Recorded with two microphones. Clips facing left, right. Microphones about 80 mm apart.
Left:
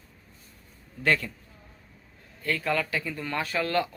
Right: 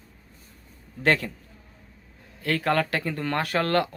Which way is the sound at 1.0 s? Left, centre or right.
Right.